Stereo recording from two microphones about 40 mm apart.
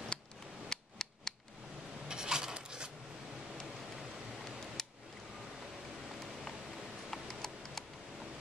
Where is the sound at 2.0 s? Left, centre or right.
Centre.